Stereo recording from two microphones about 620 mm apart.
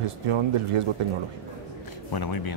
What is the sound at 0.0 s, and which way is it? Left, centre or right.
Speech, right.